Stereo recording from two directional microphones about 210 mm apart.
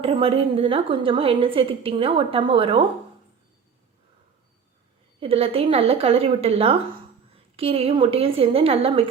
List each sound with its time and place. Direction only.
0.0 s a woman's voice: 25° right (ahead or behind)
5.2 s a woman's voice: 30° right (ahead or behind)